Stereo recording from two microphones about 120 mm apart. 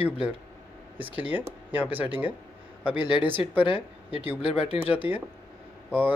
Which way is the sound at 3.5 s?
45° left (ahead or behind).